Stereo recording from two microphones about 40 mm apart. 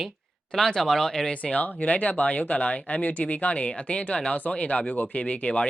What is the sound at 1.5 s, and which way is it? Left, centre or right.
Speech, left.